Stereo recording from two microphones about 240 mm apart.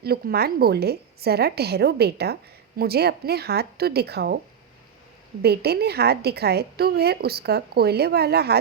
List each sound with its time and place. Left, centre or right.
0.0 s a woman's voice: right
5.4 s a woman's voice: right